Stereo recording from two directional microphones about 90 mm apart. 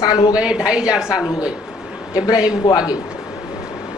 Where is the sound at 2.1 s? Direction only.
45° left (ahead or behind).